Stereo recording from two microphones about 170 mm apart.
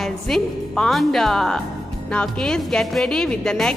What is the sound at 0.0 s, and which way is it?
A woman's voice, centre (ahead or behind).